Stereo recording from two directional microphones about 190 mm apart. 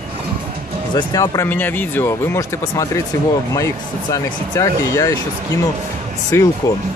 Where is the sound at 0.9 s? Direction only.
20° left (ahead or behind).